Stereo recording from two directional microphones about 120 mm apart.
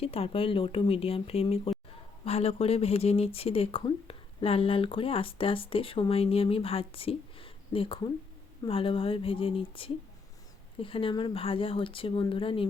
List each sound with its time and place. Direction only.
0.0 s speech: 55° left (ahead or behind)